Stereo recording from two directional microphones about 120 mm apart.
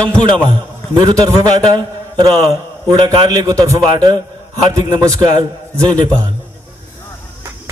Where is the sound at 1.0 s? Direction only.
30° right (ahead or behind).